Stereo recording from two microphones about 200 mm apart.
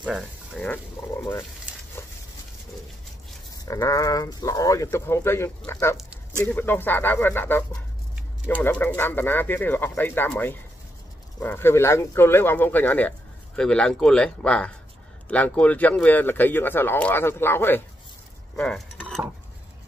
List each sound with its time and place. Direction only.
0.6 s speech: 10° left (ahead or behind)
2.0 s dog: 10° left (ahead or behind)
3.6 s speech: 15° left (ahead or behind)
5.9 s a sound: 5° right (ahead or behind)
6.4 s speech: 10° left (ahead or behind)